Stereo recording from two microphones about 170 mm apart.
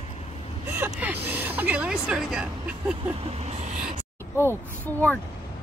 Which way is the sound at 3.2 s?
40° right (ahead or behind).